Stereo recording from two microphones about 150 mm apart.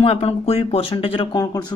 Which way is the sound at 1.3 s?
25° left (ahead or behind).